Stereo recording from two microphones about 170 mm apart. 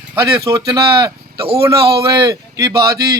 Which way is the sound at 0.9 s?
30° right (ahead or behind).